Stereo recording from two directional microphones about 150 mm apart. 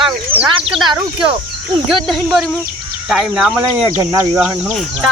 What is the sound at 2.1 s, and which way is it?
Speech, centre (ahead or behind).